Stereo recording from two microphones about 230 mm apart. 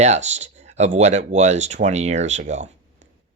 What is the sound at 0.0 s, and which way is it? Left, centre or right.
Speech, right.